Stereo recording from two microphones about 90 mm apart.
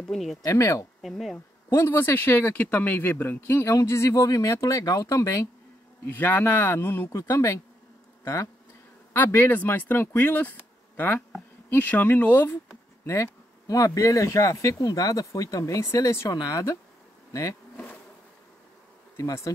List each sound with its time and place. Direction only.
0.0 s speech: 5° left (ahead or behind)
0.4 s speech: 35° left (ahead or behind)
1.0 s speech: centre (ahead or behind)
1.7 s speech: 25° left (ahead or behind)
6.0 s speech: 20° left (ahead or behind)
9.1 s speech: 20° left (ahead or behind)
13.0 s speech: 30° left (ahead or behind)
16.3 s speech: 40° left (ahead or behind)
19.1 s speech: 35° left (ahead or behind)